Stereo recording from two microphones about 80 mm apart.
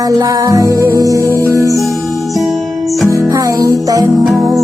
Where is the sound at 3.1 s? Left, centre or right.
Right.